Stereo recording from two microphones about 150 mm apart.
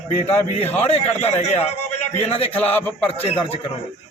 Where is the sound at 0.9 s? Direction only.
45° left (ahead or behind).